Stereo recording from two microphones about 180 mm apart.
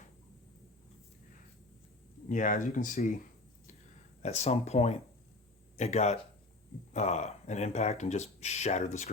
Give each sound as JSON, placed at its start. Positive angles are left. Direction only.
{"t": 2.3, "sound": "speech", "side_deg": 45}
{"t": 4.2, "sound": "speech", "side_deg": 40}